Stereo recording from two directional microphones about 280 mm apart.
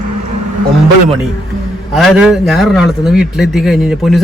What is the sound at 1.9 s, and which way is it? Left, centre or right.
A man's voice, centre.